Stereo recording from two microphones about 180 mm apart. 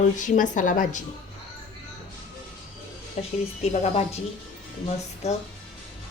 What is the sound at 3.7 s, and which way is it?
Speech, 40° left (ahead or behind).